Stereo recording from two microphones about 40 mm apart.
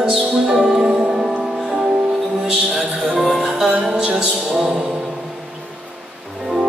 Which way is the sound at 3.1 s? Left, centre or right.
Right.